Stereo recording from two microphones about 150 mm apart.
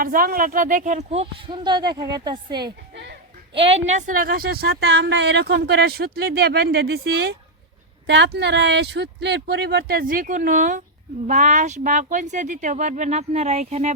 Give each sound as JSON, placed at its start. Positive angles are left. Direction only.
{"t": 0.0, "sound": "speech", "side_deg": -70}
{"t": 3.5, "sound": "a woman's voice", "side_deg": -40}
{"t": 8.8, "sound": "speech", "side_deg": -90}